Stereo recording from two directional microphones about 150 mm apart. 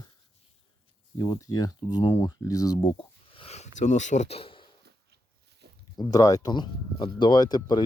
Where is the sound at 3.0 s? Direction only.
35° left (ahead or behind).